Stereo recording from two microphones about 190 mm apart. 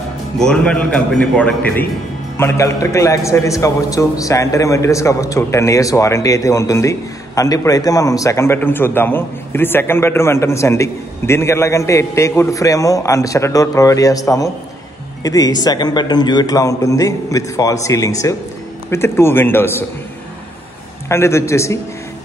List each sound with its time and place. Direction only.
0.4 s a man's voice: 5° left (ahead or behind)
21.1 s a man's voice: 15° left (ahead or behind)